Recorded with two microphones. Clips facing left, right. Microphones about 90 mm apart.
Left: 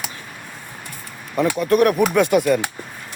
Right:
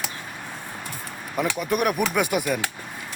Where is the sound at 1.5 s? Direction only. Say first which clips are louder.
Left 9 dB; 10° right (ahead or behind).